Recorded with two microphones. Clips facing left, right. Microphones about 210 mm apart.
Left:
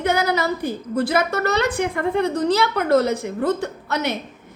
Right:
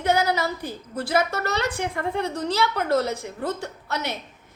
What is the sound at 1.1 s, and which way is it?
A woman's voice, 60° left (ahead or behind).